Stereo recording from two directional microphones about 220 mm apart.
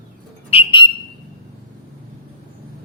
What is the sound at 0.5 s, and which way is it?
Bird, 20° left (ahead or behind).